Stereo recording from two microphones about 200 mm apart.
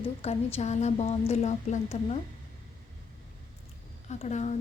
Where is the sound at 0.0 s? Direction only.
30° left (ahead or behind).